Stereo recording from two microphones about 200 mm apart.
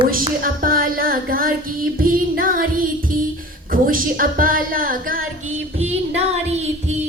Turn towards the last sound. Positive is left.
turn(degrees=-30)  # may be behind; listen again after turning